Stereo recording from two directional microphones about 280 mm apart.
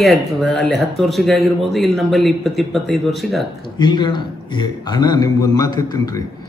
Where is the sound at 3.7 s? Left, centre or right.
Centre.